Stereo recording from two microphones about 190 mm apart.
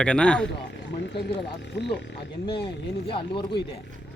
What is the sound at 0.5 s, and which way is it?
Speech, 65° left (ahead or behind).